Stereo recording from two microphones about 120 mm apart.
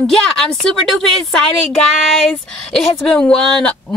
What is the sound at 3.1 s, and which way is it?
Speech, 10° left (ahead or behind).